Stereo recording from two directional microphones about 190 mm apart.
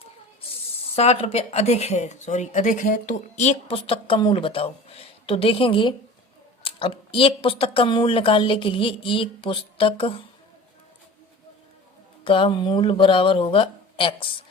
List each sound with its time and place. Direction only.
0.5 s speech: 35° left (ahead or behind)
12.2 s speech: 25° left (ahead or behind)